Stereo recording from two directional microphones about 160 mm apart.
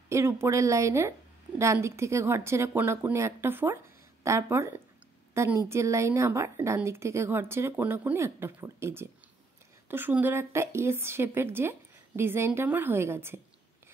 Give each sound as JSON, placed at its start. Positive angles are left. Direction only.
{"t": 0.1, "sound": "a woman's voice", "side_deg": -15}